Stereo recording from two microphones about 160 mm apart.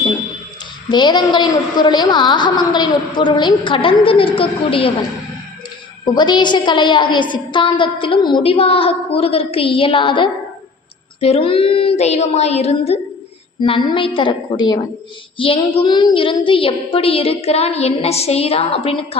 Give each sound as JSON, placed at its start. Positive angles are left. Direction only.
{"t": 0.9, "sound": "a woman's voice", "side_deg": 30}
{"t": 6.1, "sound": "a woman's voice", "side_deg": 30}